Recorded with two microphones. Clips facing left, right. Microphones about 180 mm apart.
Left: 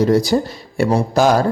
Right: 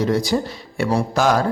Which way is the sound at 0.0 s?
40° left (ahead or behind).